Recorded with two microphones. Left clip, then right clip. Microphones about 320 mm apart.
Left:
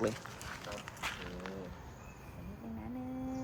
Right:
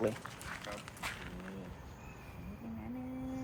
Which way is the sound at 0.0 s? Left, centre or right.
Centre.